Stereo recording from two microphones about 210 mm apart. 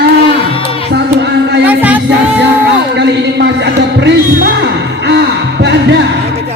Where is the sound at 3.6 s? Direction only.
55° right (ahead or behind).